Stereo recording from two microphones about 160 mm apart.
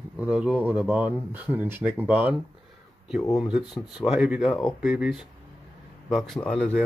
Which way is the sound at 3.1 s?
Centre (ahead or behind).